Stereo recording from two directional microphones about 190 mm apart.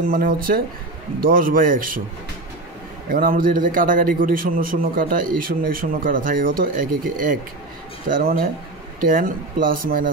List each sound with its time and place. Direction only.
0.0 s a man's voice: 50° right (ahead or behind)
3.1 s a man's voice: 50° right (ahead or behind)